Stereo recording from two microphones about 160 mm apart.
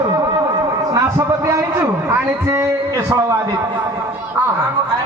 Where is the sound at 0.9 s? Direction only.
20° right (ahead or behind).